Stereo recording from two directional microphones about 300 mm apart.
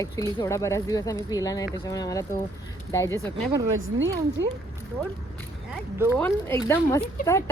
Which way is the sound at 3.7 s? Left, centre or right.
Right.